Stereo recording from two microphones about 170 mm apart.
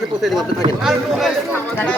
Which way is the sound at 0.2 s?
Centre (ahead or behind).